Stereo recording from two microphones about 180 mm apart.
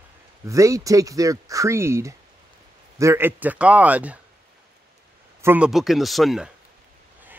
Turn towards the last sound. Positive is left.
turn(degrees=0)  # may be behind; listen again after turning